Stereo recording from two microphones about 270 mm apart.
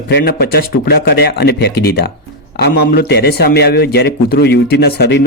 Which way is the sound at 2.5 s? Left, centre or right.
Left.